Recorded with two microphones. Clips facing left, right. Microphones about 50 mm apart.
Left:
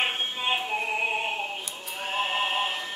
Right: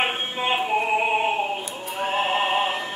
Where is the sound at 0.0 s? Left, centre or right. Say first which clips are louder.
Right 4 dB; centre.